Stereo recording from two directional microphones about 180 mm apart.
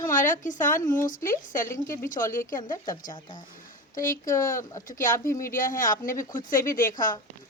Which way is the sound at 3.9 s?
50° left (ahead or behind).